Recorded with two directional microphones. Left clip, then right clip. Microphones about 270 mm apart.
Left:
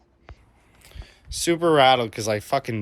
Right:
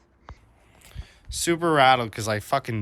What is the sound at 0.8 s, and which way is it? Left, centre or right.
Speech, centre.